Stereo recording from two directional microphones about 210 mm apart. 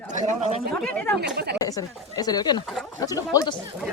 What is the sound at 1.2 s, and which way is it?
Speech, 50° right (ahead or behind).